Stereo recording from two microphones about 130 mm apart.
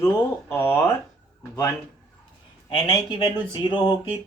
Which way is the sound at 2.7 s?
40° left (ahead or behind).